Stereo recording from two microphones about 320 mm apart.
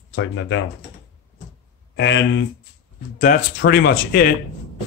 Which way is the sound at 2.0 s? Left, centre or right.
Left.